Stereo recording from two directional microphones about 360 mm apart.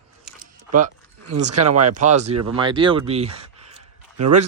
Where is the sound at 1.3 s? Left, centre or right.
Right.